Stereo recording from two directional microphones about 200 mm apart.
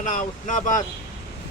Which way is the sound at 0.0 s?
40° left (ahead or behind).